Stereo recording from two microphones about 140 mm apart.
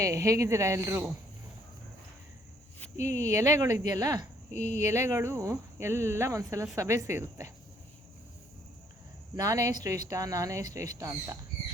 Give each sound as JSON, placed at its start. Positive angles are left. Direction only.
{"t": 0.0, "sound": "speech", "side_deg": -20}
{"t": 3.0, "sound": "speech", "side_deg": -20}
{"t": 4.5, "sound": "speech", "side_deg": 55}
{"t": 4.8, "sound": "speech", "side_deg": -20}
{"t": 9.3, "sound": "speech", "side_deg": -25}